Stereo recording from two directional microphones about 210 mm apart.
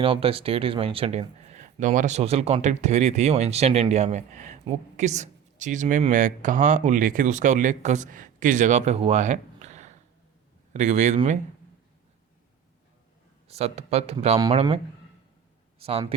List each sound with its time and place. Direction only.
0.0 s speech: 25° right (ahead or behind)
13.5 s speech: 30° right (ahead or behind)
15.8 s speech: 25° right (ahead or behind)